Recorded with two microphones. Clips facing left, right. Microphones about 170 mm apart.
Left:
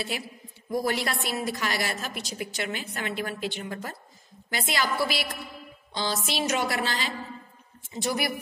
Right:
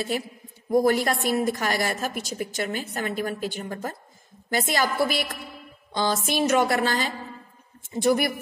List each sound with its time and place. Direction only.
0.7 s a woman's voice: 45° right (ahead or behind)